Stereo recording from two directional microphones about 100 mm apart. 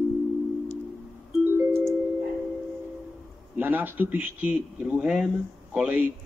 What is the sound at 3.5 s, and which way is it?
Speech, 20° right (ahead or behind).